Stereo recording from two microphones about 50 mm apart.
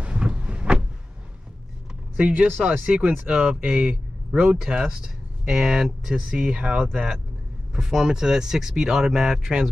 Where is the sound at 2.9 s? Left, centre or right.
Centre.